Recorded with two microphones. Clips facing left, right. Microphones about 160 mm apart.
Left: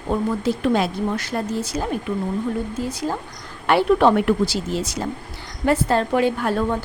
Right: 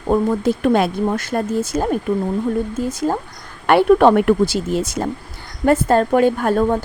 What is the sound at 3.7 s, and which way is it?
Speech, 55° right (ahead or behind).